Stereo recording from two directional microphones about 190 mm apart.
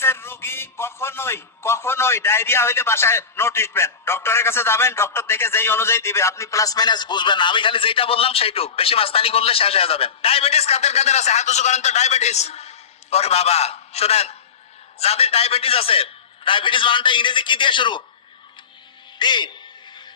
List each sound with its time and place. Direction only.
0.0 s a man's voice: 15° left (ahead or behind)
19.2 s a man's voice: 25° left (ahead or behind)
19.9 s vehicle: 25° left (ahead or behind)